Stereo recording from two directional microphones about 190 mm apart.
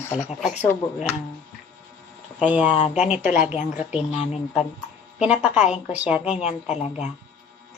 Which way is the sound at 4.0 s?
35° left (ahead or behind).